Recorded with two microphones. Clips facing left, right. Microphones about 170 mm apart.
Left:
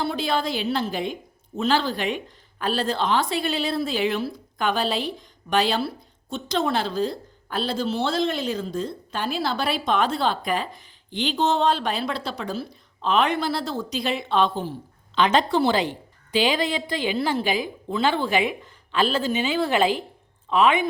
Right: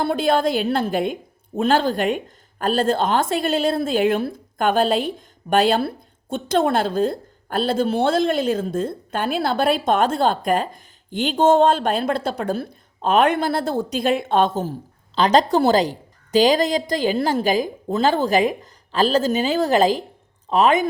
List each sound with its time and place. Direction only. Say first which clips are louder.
0.0 s a woman's voice: right 6 dB; 50° right (ahead or behind)